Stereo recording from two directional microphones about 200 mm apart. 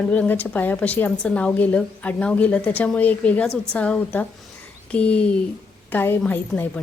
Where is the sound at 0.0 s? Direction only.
5° left (ahead or behind).